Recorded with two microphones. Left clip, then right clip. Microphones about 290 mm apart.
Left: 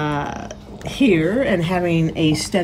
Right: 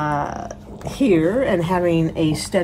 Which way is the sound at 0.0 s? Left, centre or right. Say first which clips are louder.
Right 1 dB; centre.